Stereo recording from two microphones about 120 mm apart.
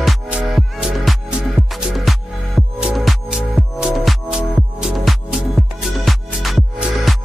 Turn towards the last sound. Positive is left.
turn(degrees=0)  # may be behind; listen again after turning